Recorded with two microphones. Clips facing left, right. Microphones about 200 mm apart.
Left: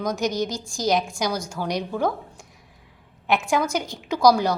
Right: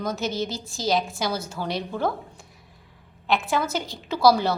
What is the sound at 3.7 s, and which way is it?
Speech, 15° left (ahead or behind).